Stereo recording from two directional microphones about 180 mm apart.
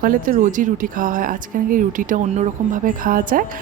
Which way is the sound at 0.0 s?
50° right (ahead or behind).